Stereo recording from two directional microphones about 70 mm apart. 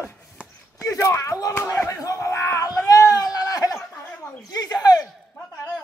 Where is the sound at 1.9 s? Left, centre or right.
Left.